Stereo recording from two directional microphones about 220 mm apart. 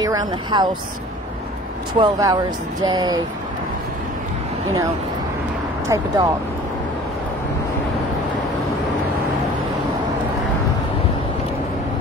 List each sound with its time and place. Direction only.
0.0 s speech: 15° right (ahead or behind)
2.0 s speech: 15° right (ahead or behind)
5.9 s speech: 15° right (ahead or behind)